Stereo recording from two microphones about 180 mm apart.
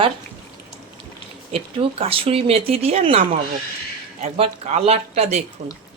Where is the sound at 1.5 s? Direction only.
30° right (ahead or behind).